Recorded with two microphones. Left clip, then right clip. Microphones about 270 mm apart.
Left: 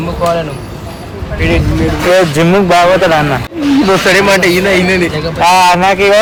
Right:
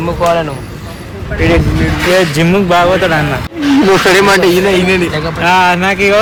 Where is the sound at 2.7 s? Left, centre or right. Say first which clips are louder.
Left 2 dB; left.